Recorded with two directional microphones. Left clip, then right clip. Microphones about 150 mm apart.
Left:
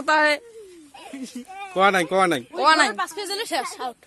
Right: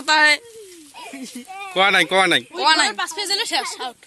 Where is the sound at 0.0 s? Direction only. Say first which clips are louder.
Right 4 dB; 75° left (ahead or behind).